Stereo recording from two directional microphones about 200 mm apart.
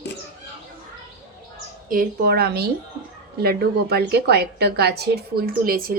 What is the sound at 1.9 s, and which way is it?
A woman's voice, 45° right (ahead or behind).